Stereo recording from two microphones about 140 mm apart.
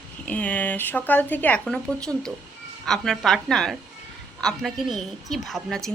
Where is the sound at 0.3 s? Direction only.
10° left (ahead or behind).